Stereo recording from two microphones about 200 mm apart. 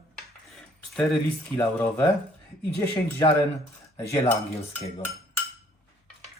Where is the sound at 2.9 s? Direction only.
25° left (ahead or behind).